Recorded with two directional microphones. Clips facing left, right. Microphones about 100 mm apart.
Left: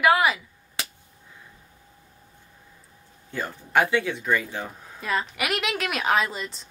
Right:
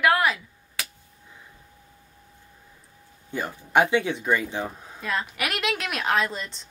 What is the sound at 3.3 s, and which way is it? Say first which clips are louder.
Speech: right 1 dB; 20° right (ahead or behind).